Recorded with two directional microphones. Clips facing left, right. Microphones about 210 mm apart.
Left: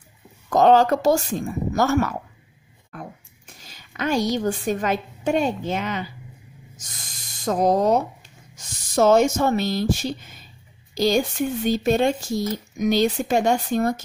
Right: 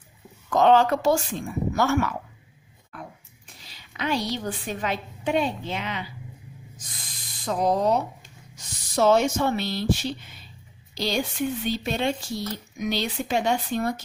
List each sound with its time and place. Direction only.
0.5 s a woman's voice: 40° left (ahead or behind)
7.4 s speech: 45° left (ahead or behind)